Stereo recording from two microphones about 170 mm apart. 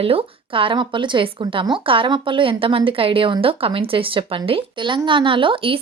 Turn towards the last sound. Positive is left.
turn(degrees=-30)  # may be behind; listen again after turning